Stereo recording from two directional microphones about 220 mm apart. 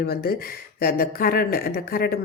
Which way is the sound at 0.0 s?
45° left (ahead or behind).